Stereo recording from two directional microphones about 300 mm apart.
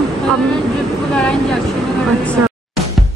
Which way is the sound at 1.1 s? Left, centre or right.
Centre.